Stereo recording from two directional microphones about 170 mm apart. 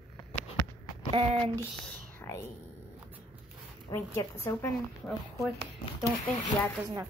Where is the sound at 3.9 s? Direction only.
20° left (ahead or behind).